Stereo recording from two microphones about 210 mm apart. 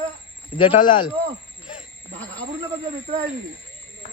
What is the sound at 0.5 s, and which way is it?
Speech, 25° left (ahead or behind).